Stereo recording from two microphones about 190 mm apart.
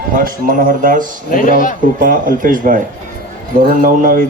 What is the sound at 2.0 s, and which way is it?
Speech, 45° right (ahead or behind).